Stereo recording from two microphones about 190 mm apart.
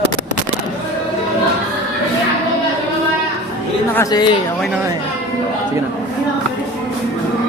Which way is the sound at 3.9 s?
20° left (ahead or behind).